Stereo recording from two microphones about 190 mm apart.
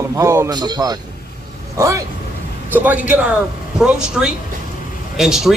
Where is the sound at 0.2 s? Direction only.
15° right (ahead or behind).